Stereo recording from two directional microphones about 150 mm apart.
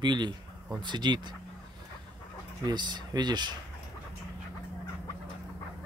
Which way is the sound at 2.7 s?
30° right (ahead or behind).